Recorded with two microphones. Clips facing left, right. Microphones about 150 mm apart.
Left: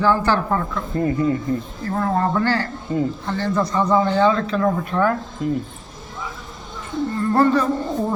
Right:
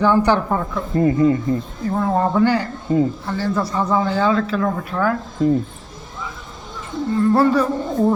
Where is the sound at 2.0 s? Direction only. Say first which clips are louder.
Right 3 dB; 10° right (ahead or behind).